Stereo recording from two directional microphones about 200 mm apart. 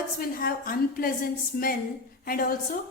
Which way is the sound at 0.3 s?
45° left (ahead or behind).